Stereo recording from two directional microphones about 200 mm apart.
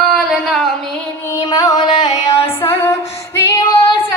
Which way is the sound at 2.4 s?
10° left (ahead or behind).